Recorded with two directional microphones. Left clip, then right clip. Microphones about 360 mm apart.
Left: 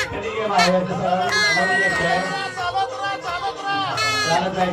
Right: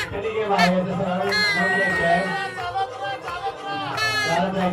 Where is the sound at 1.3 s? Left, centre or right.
Centre.